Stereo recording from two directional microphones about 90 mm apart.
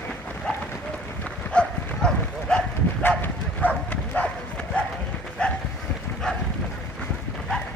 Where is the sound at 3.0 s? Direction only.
20° left (ahead or behind).